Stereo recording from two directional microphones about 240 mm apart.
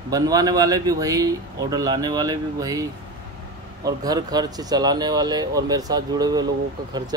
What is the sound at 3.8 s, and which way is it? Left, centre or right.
Speech, centre.